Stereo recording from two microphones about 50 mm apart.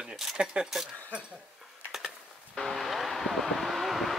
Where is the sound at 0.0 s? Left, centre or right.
Centre.